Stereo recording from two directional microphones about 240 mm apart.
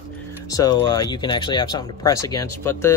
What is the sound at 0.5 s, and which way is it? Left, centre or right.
Speech, centre.